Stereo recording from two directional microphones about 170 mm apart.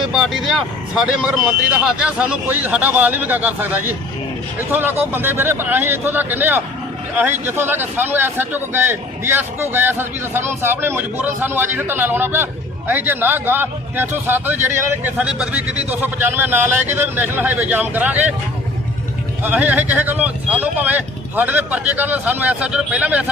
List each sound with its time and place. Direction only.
0.0 s speech: centre (ahead or behind)
19.4 s speech: 10° right (ahead or behind)